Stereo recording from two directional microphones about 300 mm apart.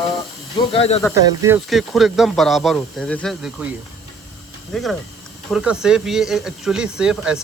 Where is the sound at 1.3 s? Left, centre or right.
Centre.